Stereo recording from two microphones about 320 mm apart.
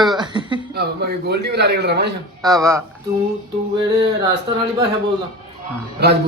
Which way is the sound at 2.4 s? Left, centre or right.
Centre.